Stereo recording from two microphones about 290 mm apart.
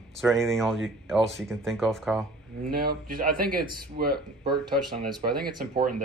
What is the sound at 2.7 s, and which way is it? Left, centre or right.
Speech, right.